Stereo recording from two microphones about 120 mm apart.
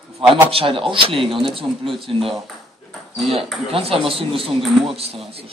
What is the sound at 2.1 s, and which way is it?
Speech, 50° right (ahead or behind).